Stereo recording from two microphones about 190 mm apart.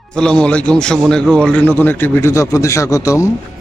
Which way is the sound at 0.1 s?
5° left (ahead or behind).